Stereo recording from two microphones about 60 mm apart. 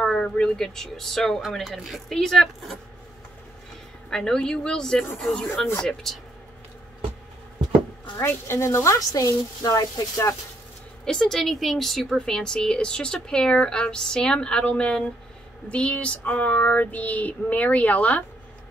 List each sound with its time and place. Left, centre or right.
0.0 s speech: centre
4.1 s speech: centre
8.2 s a woman's voice: left
9.1 s a woman's voice: left
11.1 s speech: centre
15.7 s child singing: centre